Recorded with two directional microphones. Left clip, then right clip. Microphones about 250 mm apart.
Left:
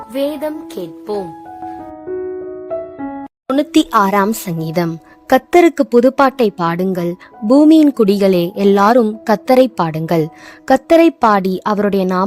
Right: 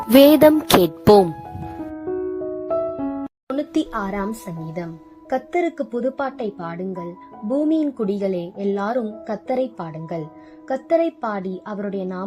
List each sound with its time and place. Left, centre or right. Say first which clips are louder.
0.1 s music: right 9 dB; right
3.5 s a woman's voice: left 11 dB; left